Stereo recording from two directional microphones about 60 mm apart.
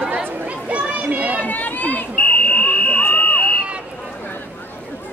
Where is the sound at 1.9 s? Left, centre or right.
Left.